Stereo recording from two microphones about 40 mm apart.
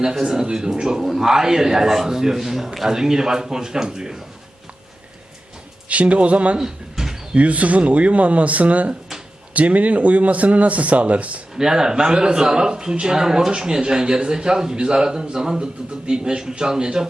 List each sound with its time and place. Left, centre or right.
0.0 s a man's voice: centre
5.9 s speech: right
6.6 s a sound: centre
7.3 s speech: right
11.5 s a man's voice: centre